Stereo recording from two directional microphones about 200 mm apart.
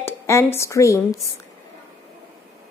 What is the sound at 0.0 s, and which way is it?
Speech, 10° left (ahead or behind).